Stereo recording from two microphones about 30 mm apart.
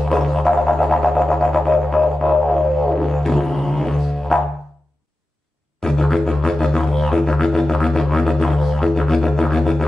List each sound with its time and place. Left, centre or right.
0.3 s didgeridoo: centre
5.8 s music: centre